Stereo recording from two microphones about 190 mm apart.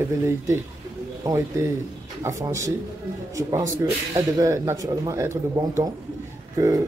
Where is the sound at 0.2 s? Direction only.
15° right (ahead or behind).